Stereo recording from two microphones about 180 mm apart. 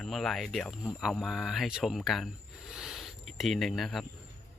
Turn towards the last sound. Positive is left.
turn(degrees=0)  # may be behind; listen again after turning